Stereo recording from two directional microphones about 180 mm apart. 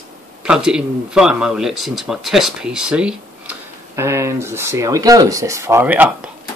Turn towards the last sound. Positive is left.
turn(degrees=-10)  # may be behind; listen again after turning